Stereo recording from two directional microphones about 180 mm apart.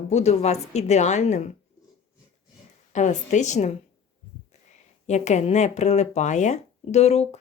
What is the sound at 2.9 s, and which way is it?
Speech, 40° left (ahead or behind).